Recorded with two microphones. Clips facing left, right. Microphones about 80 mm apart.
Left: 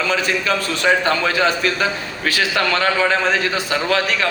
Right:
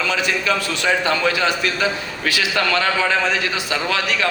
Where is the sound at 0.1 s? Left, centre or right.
Left.